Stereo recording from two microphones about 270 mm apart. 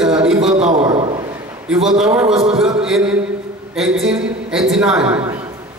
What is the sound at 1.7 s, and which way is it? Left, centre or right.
Speech, centre.